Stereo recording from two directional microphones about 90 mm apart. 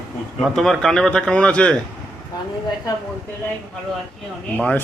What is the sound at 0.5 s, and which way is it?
Speech, 5° left (ahead or behind).